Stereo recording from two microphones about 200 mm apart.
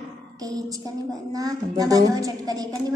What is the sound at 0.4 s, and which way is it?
A woman's voice, 20° right (ahead or behind).